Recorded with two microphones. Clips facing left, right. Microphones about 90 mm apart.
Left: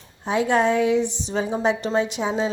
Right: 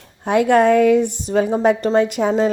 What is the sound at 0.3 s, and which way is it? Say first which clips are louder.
A woman's voice: right 6 dB; 60° right (ahead or behind).